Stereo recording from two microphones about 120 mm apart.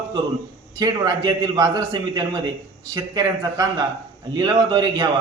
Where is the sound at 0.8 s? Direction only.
35° right (ahead or behind).